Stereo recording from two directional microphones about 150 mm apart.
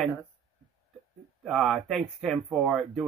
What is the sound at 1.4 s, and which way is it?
Speech, centre (ahead or behind).